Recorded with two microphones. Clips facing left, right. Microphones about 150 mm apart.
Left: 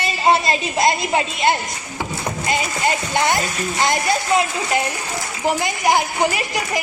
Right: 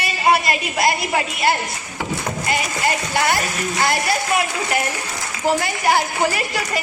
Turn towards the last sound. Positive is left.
turn(degrees=15)  # may be behind; listen again after turning